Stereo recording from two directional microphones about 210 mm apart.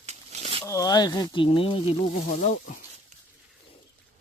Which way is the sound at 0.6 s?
15° left (ahead or behind).